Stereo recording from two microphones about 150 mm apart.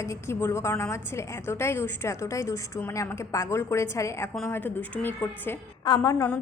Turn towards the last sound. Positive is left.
turn(degrees=15)  # may be behind; listen again after turning